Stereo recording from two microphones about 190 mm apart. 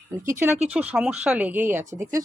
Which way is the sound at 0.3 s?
15° right (ahead or behind).